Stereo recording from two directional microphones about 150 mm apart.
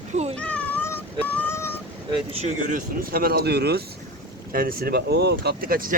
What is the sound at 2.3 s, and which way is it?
Speech, 45° right (ahead or behind).